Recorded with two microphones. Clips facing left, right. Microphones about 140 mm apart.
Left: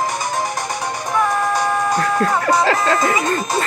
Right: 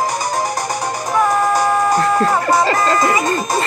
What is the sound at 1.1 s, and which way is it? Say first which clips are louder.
Music: right 3 dB; centre (ahead or behind).